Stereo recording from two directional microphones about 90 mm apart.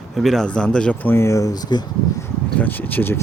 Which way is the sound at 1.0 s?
30° left (ahead or behind).